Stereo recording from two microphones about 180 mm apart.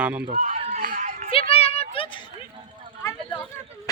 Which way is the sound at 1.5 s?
35° left (ahead or behind).